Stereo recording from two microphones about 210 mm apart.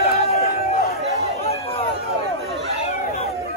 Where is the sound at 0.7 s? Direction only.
45° left (ahead or behind).